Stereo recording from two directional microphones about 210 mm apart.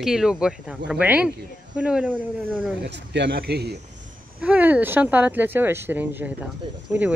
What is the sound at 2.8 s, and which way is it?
Speech, 55° right (ahead or behind).